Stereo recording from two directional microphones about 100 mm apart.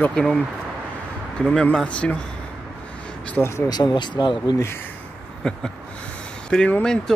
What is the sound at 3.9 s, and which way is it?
Speech, 50° left (ahead or behind).